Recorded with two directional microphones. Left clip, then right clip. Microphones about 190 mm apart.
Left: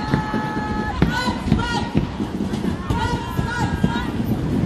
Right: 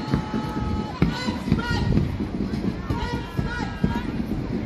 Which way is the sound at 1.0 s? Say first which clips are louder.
Left 4 dB; 45° right (ahead or behind).